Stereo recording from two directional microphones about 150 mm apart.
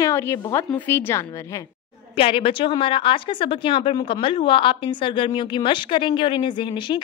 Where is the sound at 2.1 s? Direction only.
35° left (ahead or behind).